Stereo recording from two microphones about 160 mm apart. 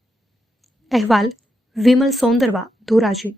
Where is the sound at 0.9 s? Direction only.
Centre (ahead or behind).